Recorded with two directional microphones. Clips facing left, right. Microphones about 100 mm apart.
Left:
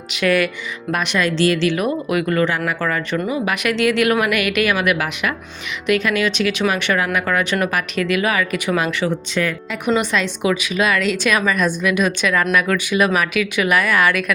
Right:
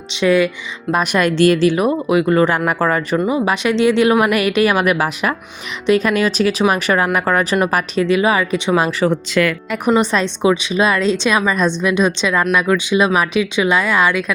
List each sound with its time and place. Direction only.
0.1 s a woman's voice: 25° right (ahead or behind)
1.1 s speech: 50° right (ahead or behind); by 2.4 s 25° right (ahead or behind)
2.6 s speech: 40° right (ahead or behind)
9.0 s speech: 85° right
10.0 s a woman's voice: 35° right (ahead or behind)